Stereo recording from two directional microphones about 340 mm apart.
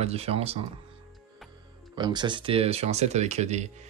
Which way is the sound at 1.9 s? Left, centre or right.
Centre.